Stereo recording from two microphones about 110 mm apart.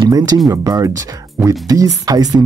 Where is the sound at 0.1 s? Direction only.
35° right (ahead or behind).